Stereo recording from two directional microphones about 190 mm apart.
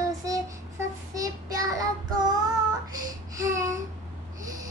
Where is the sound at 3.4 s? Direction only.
15° right (ahead or behind).